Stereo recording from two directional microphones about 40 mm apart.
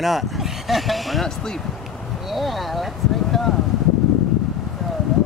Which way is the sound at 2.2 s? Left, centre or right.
Centre.